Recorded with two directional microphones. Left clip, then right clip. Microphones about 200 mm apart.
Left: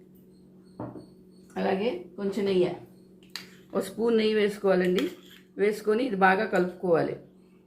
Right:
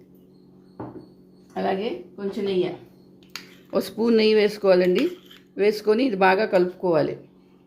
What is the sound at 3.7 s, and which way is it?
Speech, 45° right (ahead or behind).